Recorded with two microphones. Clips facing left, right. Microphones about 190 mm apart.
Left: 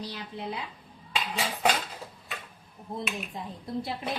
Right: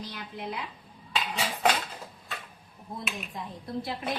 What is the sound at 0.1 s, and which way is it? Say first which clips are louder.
Speech: left 1 dB; 30° left (ahead or behind).